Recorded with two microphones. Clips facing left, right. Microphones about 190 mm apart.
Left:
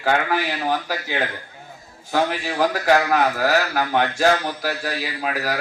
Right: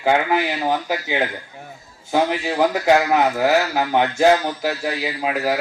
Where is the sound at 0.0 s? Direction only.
20° right (ahead or behind).